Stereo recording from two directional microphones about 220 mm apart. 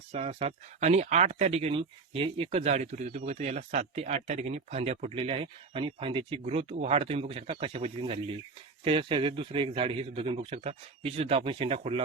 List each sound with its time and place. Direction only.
0.1 s speech: 25° right (ahead or behind)